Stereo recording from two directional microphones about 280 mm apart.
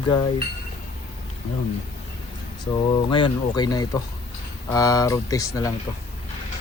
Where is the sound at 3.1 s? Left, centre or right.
Centre.